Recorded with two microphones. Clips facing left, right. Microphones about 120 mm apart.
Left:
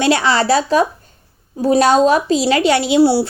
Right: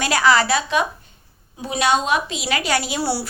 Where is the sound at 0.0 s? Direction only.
25° left (ahead or behind).